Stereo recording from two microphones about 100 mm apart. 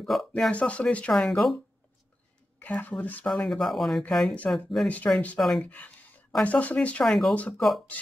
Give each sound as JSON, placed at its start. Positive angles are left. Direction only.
{"t": 0.0, "sound": "speech", "side_deg": 5}
{"t": 2.6, "sound": "speech", "side_deg": 15}
{"t": 3.3, "sound": "speech", "side_deg": 0}
{"t": 4.8, "sound": "speech", "side_deg": 15}
{"t": 5.4, "sound": "speech", "side_deg": 0}
{"t": 5.7, "sound": "a sound", "side_deg": 15}
{"t": 6.4, "sound": "speech", "side_deg": 15}
{"t": 7.1, "sound": "speech", "side_deg": 0}
{"t": 7.3, "sound": "speech", "side_deg": 15}